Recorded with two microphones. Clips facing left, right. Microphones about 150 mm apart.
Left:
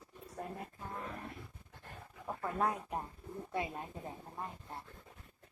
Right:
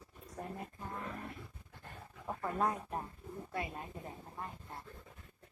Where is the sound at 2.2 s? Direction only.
Centre (ahead or behind).